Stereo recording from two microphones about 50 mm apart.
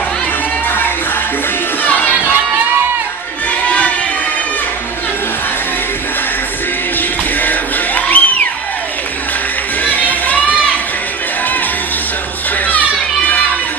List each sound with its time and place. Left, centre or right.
0.7 s music: left
3.6 s crowd: left
7.4 s music: left
9.8 s music: left